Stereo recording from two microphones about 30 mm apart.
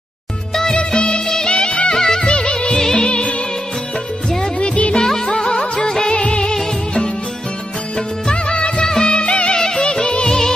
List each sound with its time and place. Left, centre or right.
0.7 s music: left
1.2 s music: left
1.5 s music: left
2.0 s music: centre
2.3 s music: left
4.6 s music: left
5.0 s music: centre
8.3 s music of bollywood: left
8.8 s music: left
9.5 s music: left